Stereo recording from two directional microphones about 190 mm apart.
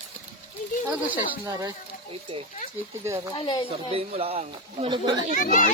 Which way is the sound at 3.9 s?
30° right (ahead or behind).